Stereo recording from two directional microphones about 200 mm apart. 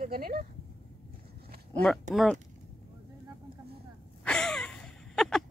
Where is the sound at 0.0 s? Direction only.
50° right (ahead or behind).